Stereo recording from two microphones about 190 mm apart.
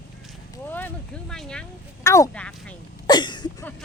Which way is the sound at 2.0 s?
15° left (ahead or behind).